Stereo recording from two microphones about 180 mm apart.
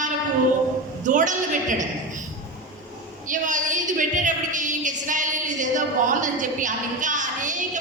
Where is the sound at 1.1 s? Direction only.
45° right (ahead or behind).